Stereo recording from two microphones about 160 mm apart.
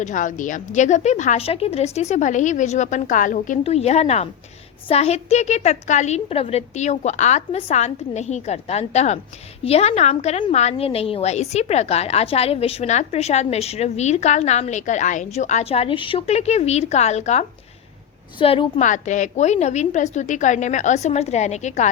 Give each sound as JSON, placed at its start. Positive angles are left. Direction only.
{"t": 0.0, "sound": "a woman's voice", "side_deg": 50}
{"t": 3.6, "sound": "a woman's voice", "side_deg": 40}
{"t": 18.3, "sound": "a woman's voice", "side_deg": 30}
{"t": 18.8, "sound": "a woman's voice", "side_deg": 50}